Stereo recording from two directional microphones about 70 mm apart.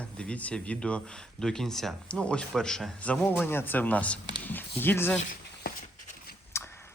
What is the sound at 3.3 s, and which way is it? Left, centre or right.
Speech, left.